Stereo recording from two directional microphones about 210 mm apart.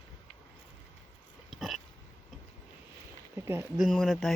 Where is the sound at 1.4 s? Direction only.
Centre (ahead or behind).